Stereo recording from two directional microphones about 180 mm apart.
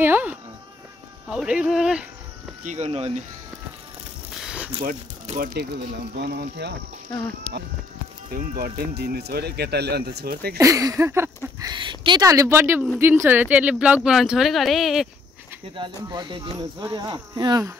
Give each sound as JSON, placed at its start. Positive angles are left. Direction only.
{"t": 0.0, "sound": "speech", "side_deg": -10}
{"t": 2.6, "sound": "speech", "side_deg": -40}
{"t": 4.4, "sound": "a sound", "side_deg": -5}
{"t": 5.2, "sound": "speech", "side_deg": -40}
{"t": 6.1, "sound": "speech", "side_deg": -60}
{"t": 8.3, "sound": "speech", "side_deg": -55}
{"t": 10.6, "sound": "a sound", "side_deg": -20}
{"t": 11.7, "sound": "speech", "side_deg": -25}
{"t": 15.7, "sound": "speech", "side_deg": -25}